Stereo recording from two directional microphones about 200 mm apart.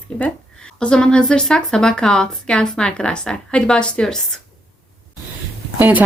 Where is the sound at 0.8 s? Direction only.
5° left (ahead or behind).